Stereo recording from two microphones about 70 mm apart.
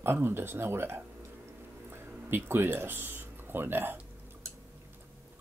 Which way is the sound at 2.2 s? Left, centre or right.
Right.